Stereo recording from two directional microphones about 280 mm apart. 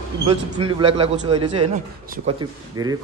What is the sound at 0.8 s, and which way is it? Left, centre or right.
Speech, centre.